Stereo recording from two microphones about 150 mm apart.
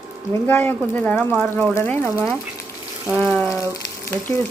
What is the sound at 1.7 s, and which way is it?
Speech, 15° left (ahead or behind).